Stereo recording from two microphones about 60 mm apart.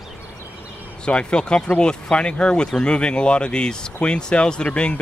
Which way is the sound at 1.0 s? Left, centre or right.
Centre.